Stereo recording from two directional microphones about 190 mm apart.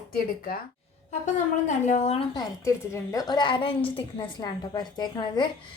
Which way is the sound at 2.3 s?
15° left (ahead or behind).